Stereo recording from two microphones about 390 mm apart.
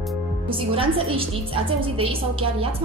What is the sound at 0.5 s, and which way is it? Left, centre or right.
A woman's voice, centre.